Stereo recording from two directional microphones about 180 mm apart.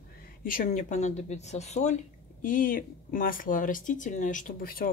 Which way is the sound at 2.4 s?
50° left (ahead or behind).